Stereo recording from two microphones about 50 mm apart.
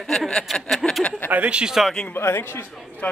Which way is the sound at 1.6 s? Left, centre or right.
Centre.